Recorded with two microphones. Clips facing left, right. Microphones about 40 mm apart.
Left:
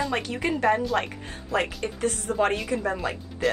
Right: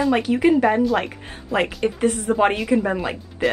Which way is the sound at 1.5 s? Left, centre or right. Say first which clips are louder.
Right 6 dB; right.